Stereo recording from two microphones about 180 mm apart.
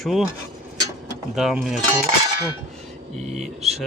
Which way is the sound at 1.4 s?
Centre (ahead or behind).